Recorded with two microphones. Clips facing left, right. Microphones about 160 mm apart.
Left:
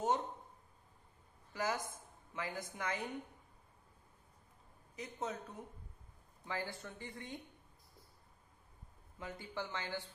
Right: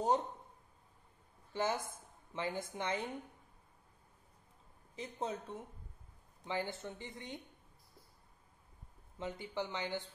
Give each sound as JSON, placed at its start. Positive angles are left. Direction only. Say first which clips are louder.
{"t": 1.5, "sound": "speech", "louder": "right 2 dB", "side_deg": -25}
{"t": 4.9, "sound": "speech", "louder": "right 2 dB", "side_deg": -30}
{"t": 9.2, "sound": "speech", "louder": "right 4 dB", "side_deg": -20}